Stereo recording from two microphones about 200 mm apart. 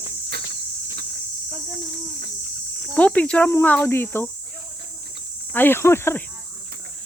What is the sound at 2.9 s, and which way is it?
Speech, 5° left (ahead or behind).